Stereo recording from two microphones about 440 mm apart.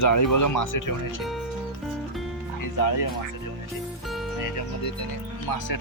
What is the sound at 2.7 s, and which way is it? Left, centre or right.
Speech, left.